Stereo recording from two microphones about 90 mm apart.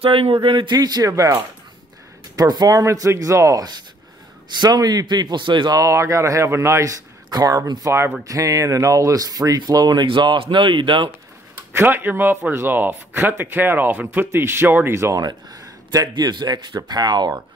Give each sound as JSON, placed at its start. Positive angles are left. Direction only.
{"t": 0.0, "sound": "speech", "side_deg": -90}
{"t": 0.7, "sound": "speech", "side_deg": -45}
{"t": 2.3, "sound": "speech", "side_deg": -50}
{"t": 2.8, "sound": "speech", "side_deg": -35}
{"t": 5.8, "sound": "speech", "side_deg": -35}
{"t": 10.0, "sound": "speech", "side_deg": -65}
{"t": 11.5, "sound": "speech", "side_deg": -25}
{"t": 15.1, "sound": "speech", "side_deg": -45}
{"t": 16.1, "sound": "speech", "side_deg": -55}